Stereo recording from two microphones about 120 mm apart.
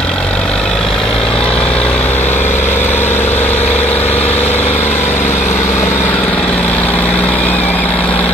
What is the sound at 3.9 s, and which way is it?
Vehicle, 15° left (ahead or behind).